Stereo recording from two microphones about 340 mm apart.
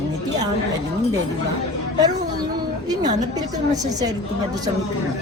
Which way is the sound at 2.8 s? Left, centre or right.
Centre.